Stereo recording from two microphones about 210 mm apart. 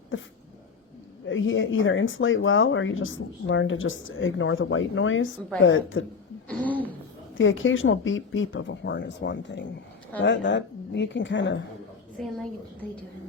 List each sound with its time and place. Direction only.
1.3 s speech: 65° left (ahead or behind)
6.5 s a sound: 5° left (ahead or behind)
7.3 s speech: 65° left (ahead or behind)
12.1 s a woman's voice: centre (ahead or behind)